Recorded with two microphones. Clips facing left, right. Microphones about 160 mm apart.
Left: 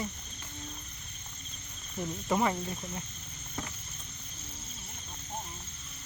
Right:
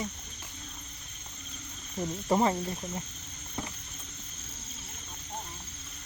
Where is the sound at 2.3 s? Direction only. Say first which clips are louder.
Right 3 dB; 35° right (ahead or behind).